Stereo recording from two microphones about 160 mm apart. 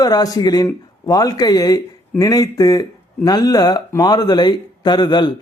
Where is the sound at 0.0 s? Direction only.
25° left (ahead or behind).